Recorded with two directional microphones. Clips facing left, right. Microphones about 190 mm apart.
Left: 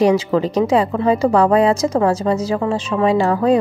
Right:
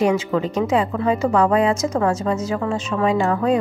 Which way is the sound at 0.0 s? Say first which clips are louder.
Left 4 dB; 35° left (ahead or behind).